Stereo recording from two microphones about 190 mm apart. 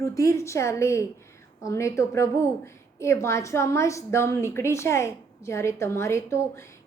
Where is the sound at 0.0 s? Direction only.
15° left (ahead or behind).